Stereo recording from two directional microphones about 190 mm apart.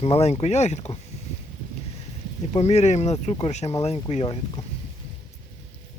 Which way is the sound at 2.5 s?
35° left (ahead or behind).